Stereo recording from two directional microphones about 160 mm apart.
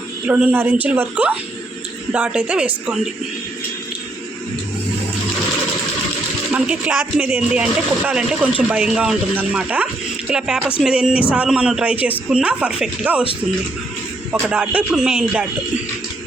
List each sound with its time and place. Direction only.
0.3 s speech: 10° right (ahead or behind)
6.5 s speech: 5° right (ahead or behind)
14.4 s speech: 10° right (ahead or behind)